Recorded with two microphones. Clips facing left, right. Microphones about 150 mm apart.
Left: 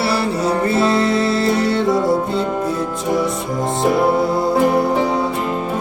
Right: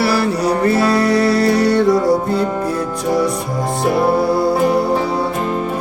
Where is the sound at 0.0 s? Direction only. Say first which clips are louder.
Right 2 dB; 25° left (ahead or behind).